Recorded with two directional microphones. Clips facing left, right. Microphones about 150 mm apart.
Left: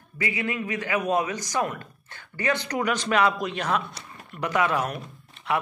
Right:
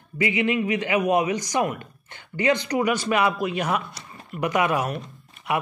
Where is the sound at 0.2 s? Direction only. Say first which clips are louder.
Right 6 dB; 20° right (ahead or behind).